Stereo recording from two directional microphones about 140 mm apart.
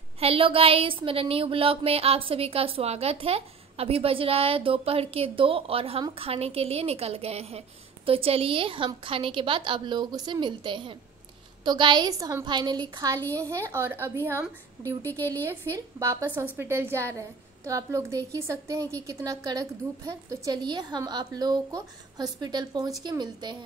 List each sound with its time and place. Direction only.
0.2 s a woman's voice: 40° right (ahead or behind); by 15.0 s 20° right (ahead or behind)
15.0 s speech: 15° left (ahead or behind)
15.4 s a woman's voice: 20° right (ahead or behind)